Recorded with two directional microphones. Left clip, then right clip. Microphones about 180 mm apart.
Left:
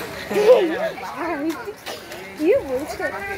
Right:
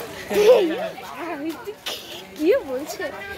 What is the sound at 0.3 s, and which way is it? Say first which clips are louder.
Speech: left 1 dB; 30° right (ahead or behind).